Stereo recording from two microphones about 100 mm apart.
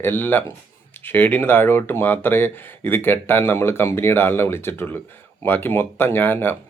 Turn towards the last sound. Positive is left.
turn(degrees=20)  # may be behind; listen again after turning